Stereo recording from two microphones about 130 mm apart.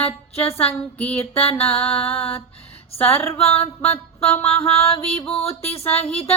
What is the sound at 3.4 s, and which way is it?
Music, 50° left (ahead or behind).